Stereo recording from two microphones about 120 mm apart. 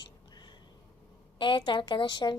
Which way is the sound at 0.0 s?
40° left (ahead or behind).